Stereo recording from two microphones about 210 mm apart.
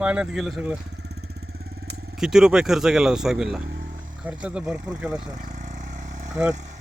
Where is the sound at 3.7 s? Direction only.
40° right (ahead or behind).